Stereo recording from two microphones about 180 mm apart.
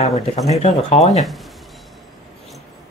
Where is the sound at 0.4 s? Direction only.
40° left (ahead or behind).